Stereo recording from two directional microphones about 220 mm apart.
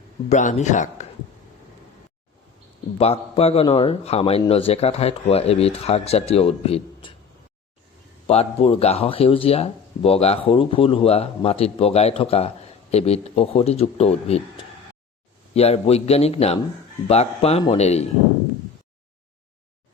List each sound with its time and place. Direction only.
0.3 s speech: 30° left (ahead or behind)
3.0 s speech: 30° left (ahead or behind)
8.3 s speech: 30° left (ahead or behind)
15.5 s speech: 30° left (ahead or behind)